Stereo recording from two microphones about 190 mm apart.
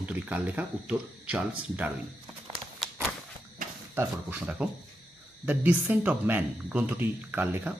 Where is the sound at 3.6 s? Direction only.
45° right (ahead or behind).